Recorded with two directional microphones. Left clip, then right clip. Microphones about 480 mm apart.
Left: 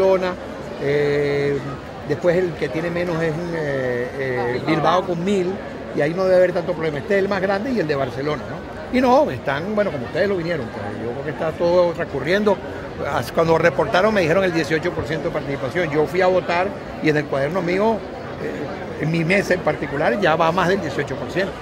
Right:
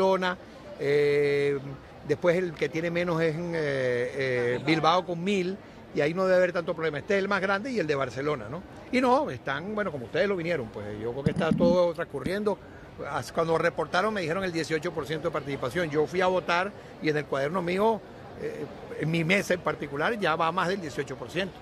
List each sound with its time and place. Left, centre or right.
0.0 s a man's voice: right
11.4 s speech: right
12.3 s speech: right
19.1 s speech: right